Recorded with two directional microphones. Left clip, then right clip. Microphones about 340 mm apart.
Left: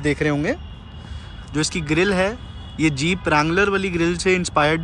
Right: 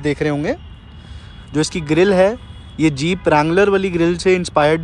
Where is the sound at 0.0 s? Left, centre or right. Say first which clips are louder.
Right 2 dB; centre.